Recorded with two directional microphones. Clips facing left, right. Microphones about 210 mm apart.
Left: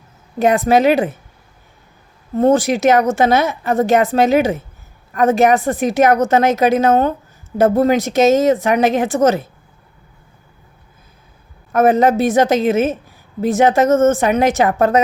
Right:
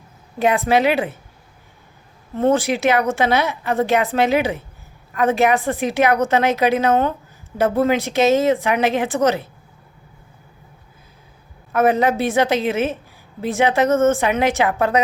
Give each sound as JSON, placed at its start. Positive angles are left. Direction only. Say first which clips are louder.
{"t": 0.3, "sound": "a woman's voice", "louder": "left 4 dB", "side_deg": 45}
{"t": 2.3, "sound": "a woman's voice", "louder": "left 4 dB", "side_deg": 40}
{"t": 11.7, "sound": "a woman's voice", "louder": "left 4 dB", "side_deg": 45}